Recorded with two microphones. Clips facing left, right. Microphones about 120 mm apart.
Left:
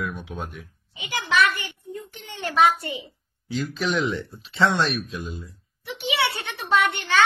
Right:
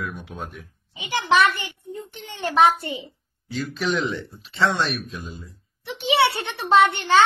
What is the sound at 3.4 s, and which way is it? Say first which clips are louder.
Speech: even; centre (ahead or behind).